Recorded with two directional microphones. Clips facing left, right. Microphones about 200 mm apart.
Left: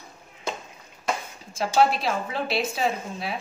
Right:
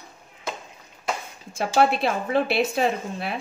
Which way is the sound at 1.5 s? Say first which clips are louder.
Right 1 dB; 55° right (ahead or behind).